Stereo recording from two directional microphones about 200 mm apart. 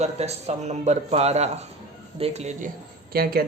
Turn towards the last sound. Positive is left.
turn(degrees=-50)  # may be behind; listen again after turning